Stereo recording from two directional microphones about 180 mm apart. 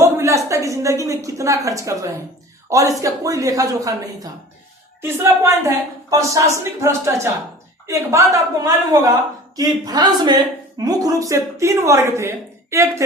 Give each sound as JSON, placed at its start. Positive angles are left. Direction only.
{"t": 0.0, "sound": "a woman's voice", "side_deg": -15}